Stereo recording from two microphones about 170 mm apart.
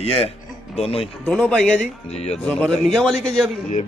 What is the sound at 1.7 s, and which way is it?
Speech, 40° left (ahead or behind).